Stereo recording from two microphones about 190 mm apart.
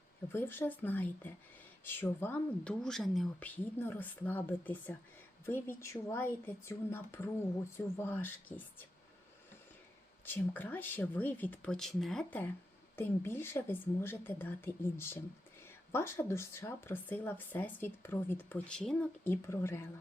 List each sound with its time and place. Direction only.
0.3 s speech: 10° left (ahead or behind)
10.2 s speech: 10° left (ahead or behind)